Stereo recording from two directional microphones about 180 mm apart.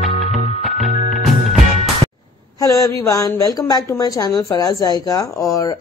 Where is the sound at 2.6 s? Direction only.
20° left (ahead or behind).